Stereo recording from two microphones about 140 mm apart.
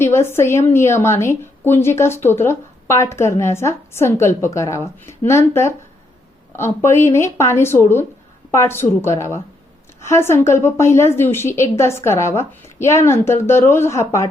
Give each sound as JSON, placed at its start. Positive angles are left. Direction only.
{"t": 0.0, "sound": "a woman's voice", "side_deg": 15}